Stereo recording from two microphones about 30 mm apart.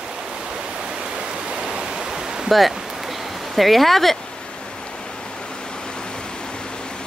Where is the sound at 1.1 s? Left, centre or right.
Right.